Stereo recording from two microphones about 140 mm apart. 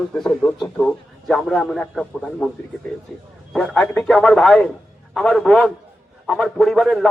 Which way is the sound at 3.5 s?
5° left (ahead or behind).